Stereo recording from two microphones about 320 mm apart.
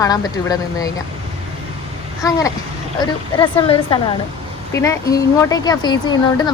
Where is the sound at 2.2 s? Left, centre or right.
Centre.